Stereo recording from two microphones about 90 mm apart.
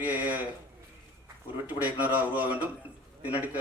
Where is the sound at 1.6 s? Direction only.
20° right (ahead or behind).